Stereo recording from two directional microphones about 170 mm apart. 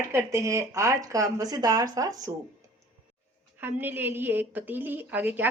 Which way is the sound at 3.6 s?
10° right (ahead or behind).